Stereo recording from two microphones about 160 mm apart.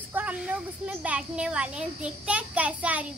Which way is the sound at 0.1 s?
10° right (ahead or behind).